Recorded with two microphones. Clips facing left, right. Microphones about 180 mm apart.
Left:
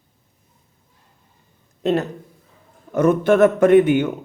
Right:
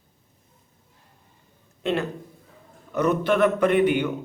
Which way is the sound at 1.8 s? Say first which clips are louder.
Left 5 dB; 40° left (ahead or behind).